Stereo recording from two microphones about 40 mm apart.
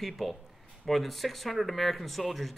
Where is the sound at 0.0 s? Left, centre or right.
Centre.